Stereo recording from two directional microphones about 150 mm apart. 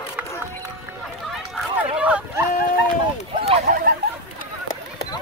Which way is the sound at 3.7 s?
55° right (ahead or behind).